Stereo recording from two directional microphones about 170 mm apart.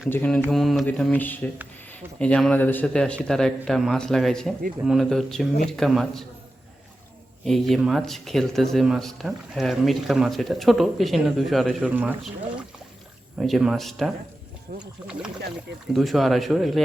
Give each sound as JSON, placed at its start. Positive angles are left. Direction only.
{"t": 0.1, "sound": "a man's voice", "side_deg": 10}
{"t": 7.4, "sound": "speech", "side_deg": 0}
{"t": 14.7, "sound": "speech", "side_deg": -65}
{"t": 15.9, "sound": "speech", "side_deg": 0}